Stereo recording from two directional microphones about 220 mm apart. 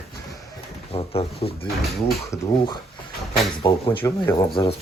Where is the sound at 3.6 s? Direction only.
25° left (ahead or behind).